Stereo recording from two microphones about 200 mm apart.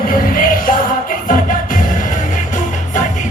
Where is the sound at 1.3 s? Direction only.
40° left (ahead or behind).